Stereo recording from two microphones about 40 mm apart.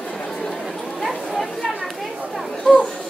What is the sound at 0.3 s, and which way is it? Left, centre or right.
Chatter, centre.